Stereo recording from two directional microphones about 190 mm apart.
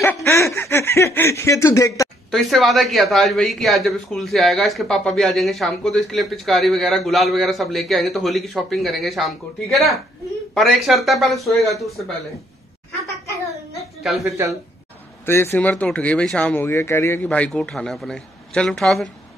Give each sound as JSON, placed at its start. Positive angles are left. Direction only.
{"t": 0.0, "sound": "snicker", "side_deg": 10}
{"t": 2.3, "sound": "speech", "side_deg": 0}
{"t": 14.2, "sound": "speech", "side_deg": -15}
{"t": 15.2, "sound": "speech", "side_deg": 10}